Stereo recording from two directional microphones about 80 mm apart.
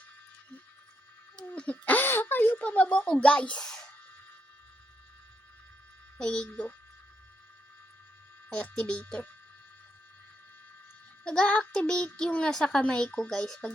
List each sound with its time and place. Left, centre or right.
1.5 s a child's voice: centre
6.1 s a child's voice: centre
8.4 s a child's voice: centre
11.2 s a child's voice: centre